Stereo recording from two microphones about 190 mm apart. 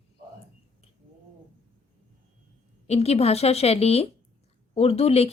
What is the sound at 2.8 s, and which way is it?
A woman's voice, 35° left (ahead or behind).